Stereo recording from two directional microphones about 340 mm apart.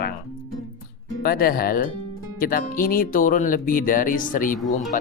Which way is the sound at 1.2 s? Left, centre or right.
Left.